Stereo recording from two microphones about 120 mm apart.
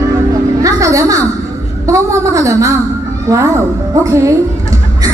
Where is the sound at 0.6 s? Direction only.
25° right (ahead or behind).